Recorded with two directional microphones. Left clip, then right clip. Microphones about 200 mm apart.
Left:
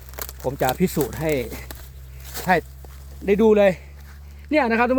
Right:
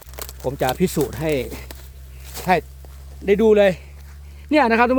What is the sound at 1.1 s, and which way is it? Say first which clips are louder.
Speech: right 1 dB; 20° right (ahead or behind).